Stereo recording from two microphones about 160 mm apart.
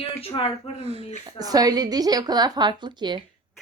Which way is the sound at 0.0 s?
35° left (ahead or behind).